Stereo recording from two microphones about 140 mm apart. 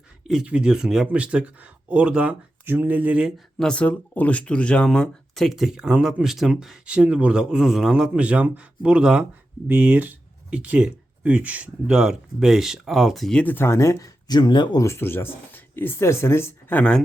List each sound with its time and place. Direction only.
0.3 s speech: 5° right (ahead or behind)
13.4 s speech: 15° left (ahead or behind)